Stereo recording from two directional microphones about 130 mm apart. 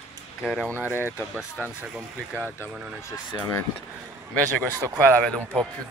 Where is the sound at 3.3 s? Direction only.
25° left (ahead or behind).